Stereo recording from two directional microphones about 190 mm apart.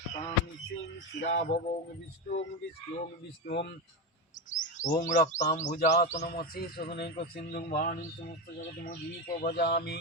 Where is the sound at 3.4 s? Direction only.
60° left (ahead or behind).